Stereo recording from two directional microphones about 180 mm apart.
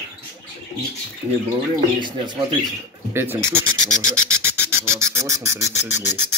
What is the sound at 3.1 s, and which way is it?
Speech, 15° right (ahead or behind).